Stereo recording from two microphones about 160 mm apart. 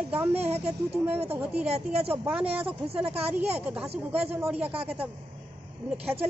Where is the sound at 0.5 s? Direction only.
40° right (ahead or behind).